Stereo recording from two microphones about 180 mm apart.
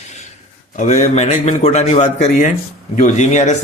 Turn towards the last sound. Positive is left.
turn(degrees=40)  # may be behind; listen again after turning